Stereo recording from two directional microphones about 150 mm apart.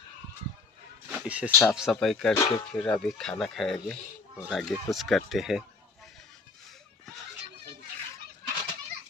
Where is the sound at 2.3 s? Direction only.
25° left (ahead or behind).